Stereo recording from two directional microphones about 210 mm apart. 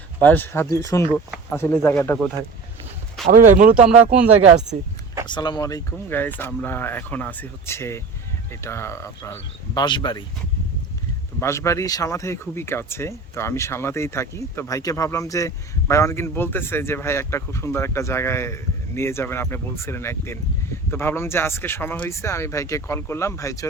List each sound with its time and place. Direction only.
0.2 s speech: 10° left (ahead or behind)
3.2 s speech: 35° right (ahead or behind)
5.2 s speech: 20° left (ahead or behind)
11.3 s speech: 15° left (ahead or behind)